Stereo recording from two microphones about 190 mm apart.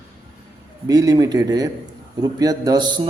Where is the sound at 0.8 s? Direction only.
20° right (ahead or behind).